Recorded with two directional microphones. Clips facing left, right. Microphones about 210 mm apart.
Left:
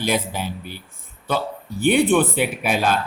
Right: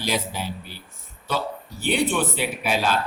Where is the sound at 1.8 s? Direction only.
55° left (ahead or behind).